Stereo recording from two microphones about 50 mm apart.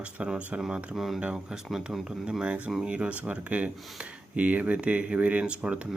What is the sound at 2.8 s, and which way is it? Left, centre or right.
Speech, right.